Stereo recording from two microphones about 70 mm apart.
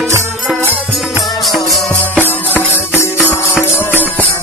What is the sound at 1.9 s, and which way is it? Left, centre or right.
Music, left.